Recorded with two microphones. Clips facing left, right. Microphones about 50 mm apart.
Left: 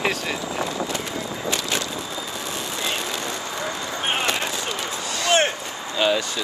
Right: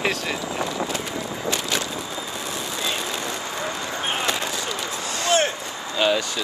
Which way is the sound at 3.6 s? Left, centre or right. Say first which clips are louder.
Left 1 dB; left.